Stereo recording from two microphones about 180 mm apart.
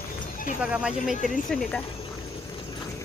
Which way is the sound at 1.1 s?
45° left (ahead or behind).